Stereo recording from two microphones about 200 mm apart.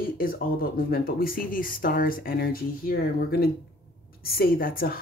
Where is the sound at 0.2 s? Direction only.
45° left (ahead or behind).